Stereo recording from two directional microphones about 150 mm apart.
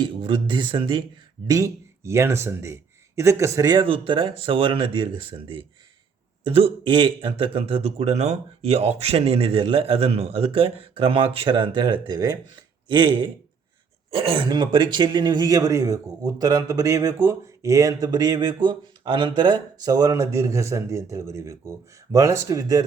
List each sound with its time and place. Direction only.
0.0 s a man's voice: 35° right (ahead or behind)
1.5 s a man's voice: 20° right (ahead or behind)
14.1 s a man's voice: 40° right (ahead or behind); by 22.8 s 20° right (ahead or behind)